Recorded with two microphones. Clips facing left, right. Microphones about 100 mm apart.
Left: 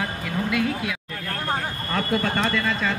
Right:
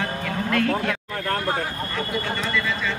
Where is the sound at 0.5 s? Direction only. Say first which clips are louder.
Right 4 dB; 10° left (ahead or behind).